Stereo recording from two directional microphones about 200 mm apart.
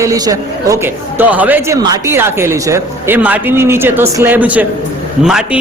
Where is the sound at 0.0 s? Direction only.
15° right (ahead or behind).